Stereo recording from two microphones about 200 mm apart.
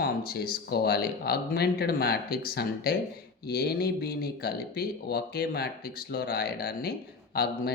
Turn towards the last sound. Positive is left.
turn(degrees=50)  # may be behind; listen again after turning